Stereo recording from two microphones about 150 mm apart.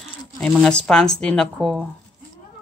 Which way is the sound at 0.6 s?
5° left (ahead or behind).